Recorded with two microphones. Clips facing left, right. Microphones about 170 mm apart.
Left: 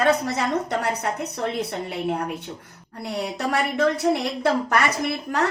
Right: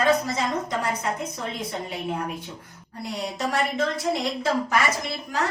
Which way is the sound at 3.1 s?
65° left (ahead or behind).